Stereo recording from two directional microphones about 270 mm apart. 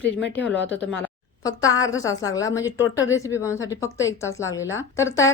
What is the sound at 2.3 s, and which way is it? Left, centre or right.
A woman's voice, centre.